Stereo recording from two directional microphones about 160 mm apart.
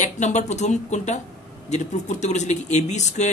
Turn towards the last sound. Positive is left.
turn(degrees=45)  # may be behind; listen again after turning